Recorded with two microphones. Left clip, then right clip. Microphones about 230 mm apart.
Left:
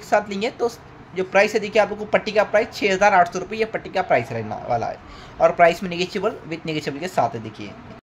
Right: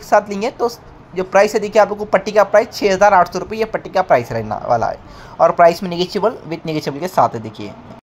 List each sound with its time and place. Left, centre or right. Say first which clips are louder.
0.1 s a woman's voice: right 6 dB; centre